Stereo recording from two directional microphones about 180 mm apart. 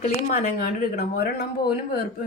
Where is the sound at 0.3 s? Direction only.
50° left (ahead or behind).